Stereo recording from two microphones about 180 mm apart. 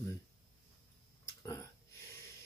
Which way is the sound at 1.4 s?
15° left (ahead or behind).